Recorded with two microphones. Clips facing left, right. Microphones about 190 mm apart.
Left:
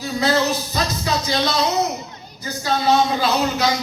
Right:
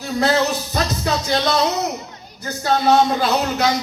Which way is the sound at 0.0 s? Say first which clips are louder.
Right 1 dB; 55° right (ahead or behind).